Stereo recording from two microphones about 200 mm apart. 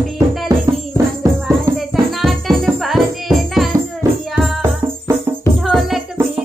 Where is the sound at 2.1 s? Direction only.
Centre (ahead or behind).